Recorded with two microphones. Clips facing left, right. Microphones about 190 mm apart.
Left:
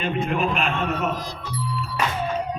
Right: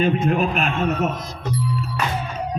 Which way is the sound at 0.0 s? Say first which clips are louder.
Right 5 dB; 45° right (ahead or behind).